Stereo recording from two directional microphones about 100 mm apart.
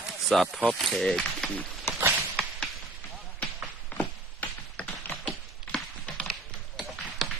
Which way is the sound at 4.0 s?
10° left (ahead or behind).